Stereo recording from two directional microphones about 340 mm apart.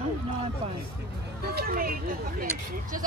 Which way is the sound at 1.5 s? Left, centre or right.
Right.